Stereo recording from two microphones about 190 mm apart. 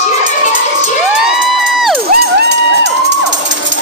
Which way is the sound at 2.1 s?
60° right (ahead or behind).